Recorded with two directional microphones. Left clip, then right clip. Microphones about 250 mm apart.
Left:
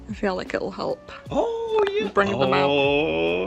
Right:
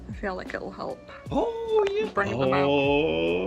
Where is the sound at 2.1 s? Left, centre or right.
Left.